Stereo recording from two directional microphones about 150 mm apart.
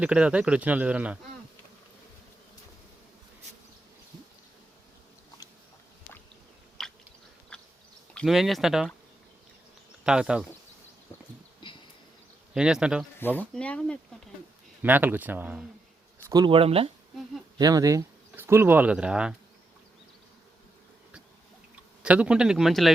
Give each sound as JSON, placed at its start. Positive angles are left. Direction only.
{"t": 0.0, "sound": "speech", "side_deg": -5}
{"t": 6.8, "sound": "a sound", "side_deg": 0}
{"t": 7.5, "sound": "insect", "side_deg": 5}
{"t": 8.1, "sound": "speech", "side_deg": 0}
{"t": 10.0, "sound": "speech", "side_deg": -5}
{"t": 11.1, "sound": "a sound", "side_deg": 20}
{"t": 11.6, "sound": "a sound", "side_deg": 30}
{"t": 12.5, "sound": "speech", "side_deg": -5}
{"t": 13.1, "sound": "speech", "side_deg": 10}
{"t": 14.8, "sound": "speech", "side_deg": -10}
{"t": 16.3, "sound": "speech", "side_deg": -25}
{"t": 16.6, "sound": "speech", "side_deg": -40}
{"t": 17.6, "sound": "speech", "side_deg": -25}
{"t": 22.0, "sound": "speech", "side_deg": -10}